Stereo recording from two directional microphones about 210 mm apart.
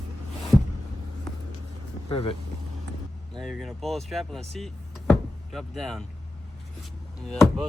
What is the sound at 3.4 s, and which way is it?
Speech, centre (ahead or behind).